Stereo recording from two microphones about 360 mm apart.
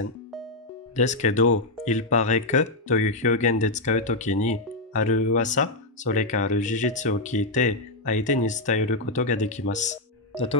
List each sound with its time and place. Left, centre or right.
0.9 s speech: centre